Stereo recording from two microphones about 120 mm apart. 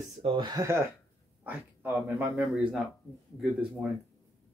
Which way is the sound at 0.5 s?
25° right (ahead or behind).